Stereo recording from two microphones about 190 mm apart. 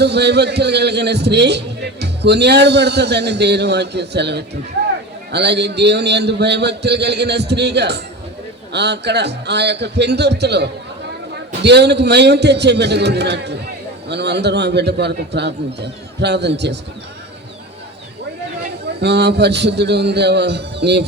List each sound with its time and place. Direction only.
0.0 s a man's voice: 60° right (ahead or behind)
18.9 s a man's voice: 60° right (ahead or behind)